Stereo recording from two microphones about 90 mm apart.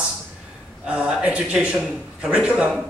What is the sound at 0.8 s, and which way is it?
A man's voice, 10° right (ahead or behind).